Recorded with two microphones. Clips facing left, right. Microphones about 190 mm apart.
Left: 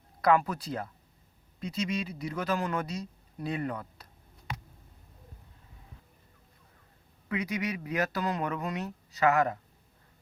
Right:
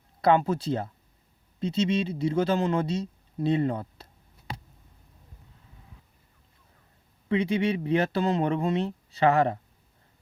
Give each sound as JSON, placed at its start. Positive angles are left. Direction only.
{"t": 0.2, "sound": "speech", "side_deg": -25}
{"t": 7.3, "sound": "speech", "side_deg": -30}